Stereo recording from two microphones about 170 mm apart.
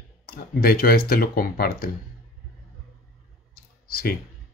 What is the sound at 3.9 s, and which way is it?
Speech, 60° left (ahead or behind).